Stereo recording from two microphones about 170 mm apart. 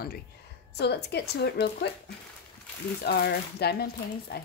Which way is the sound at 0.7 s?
75° left (ahead or behind).